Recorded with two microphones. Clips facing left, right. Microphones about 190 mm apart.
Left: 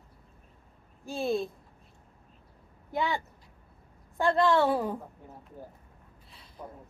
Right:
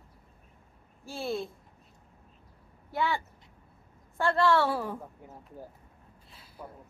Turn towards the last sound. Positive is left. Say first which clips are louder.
# left 1 dB
turn(degrees=0)  # may be behind; listen again after turning